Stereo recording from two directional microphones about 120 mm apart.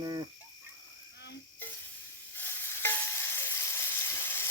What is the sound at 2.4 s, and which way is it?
Stir, 20° left (ahead or behind).